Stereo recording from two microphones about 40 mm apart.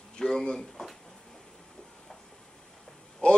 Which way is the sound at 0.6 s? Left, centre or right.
Centre.